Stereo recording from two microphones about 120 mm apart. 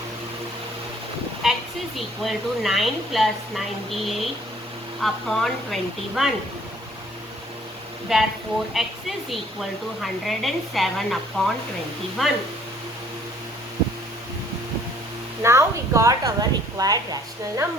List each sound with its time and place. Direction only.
1.4 s a woman's voice: 5° right (ahead or behind)
8.1 s speech: centre (ahead or behind)
15.4 s a woman's voice: 25° right (ahead or behind)